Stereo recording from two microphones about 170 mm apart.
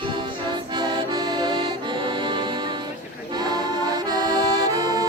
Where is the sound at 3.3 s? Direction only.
25° right (ahead or behind).